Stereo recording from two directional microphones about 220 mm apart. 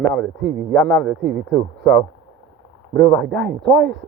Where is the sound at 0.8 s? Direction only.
50° right (ahead or behind).